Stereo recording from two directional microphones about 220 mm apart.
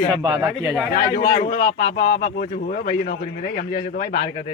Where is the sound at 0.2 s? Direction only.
20° right (ahead or behind).